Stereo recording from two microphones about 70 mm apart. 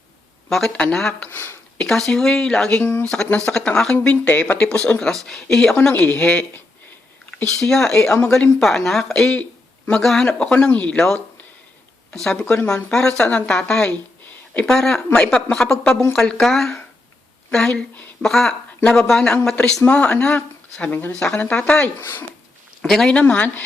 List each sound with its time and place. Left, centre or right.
0.5 s speech: centre
1.3 s speech: left
1.8 s speech: centre
2.8 s speech: left
3.2 s speech: centre
5.9 s speech: left
7.4 s speech: centre
12.1 s speech: centre
18.8 s speech: centre
22.0 s speech: left
22.8 s speech: centre
23.1 s speech: centre